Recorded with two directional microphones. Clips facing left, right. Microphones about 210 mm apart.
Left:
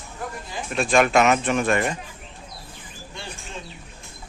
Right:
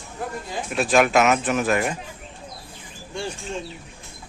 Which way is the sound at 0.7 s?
5° right (ahead or behind).